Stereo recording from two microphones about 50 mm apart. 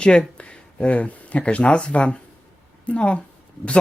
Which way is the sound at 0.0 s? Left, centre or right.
Centre.